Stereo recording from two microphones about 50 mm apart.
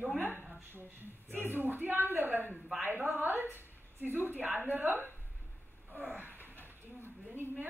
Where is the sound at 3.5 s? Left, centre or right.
Right.